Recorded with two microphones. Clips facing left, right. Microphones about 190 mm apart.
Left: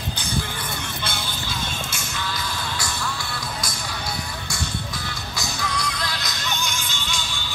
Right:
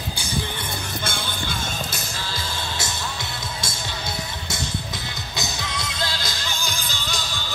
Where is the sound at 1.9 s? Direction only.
35° right (ahead or behind).